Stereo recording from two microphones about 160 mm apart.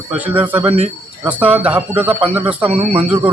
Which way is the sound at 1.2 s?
10° right (ahead or behind).